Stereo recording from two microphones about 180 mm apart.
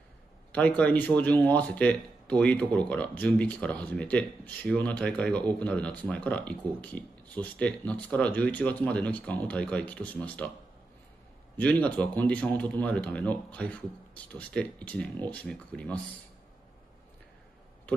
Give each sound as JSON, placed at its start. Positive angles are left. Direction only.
{"t": 0.5, "sound": "speech", "side_deg": 5}
{"t": 11.5, "sound": "speech", "side_deg": 10}